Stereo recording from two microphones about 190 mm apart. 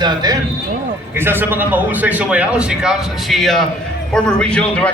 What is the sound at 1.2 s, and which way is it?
A man's voice, 10° right (ahead or behind).